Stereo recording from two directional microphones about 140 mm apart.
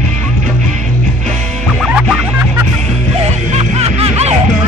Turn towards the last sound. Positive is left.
turn(degrees=-45)  # may be behind; listen again after turning